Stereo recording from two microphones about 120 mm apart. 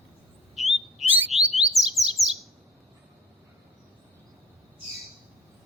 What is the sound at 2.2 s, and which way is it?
Chirp, 25° right (ahead or behind).